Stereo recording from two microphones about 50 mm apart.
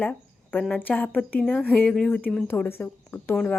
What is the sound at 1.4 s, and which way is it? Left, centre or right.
Speech, left.